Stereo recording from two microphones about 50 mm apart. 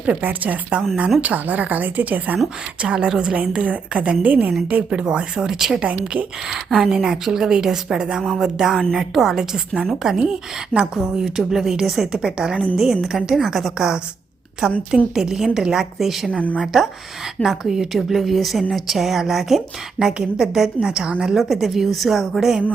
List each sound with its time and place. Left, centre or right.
0.2 s a woman's voice: right
2.8 s a woman's voice: centre
5.8 s a woman's voice: right
6.5 s a woman's voice: centre
10.7 s a woman's voice: left
11.1 s speech: centre
14.8 s a woman's voice: centre